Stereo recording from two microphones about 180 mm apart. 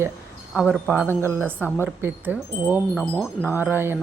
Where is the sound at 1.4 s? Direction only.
10° left (ahead or behind).